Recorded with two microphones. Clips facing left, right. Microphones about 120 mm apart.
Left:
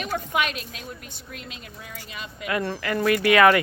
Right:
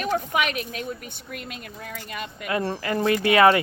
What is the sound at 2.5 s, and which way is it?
Speech, 30° right (ahead or behind).